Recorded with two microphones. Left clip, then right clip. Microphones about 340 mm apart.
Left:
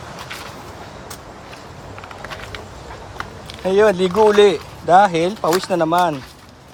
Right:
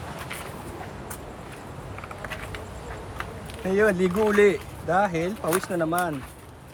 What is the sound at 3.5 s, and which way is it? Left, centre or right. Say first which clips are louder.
Speech: left 8 dB; centre.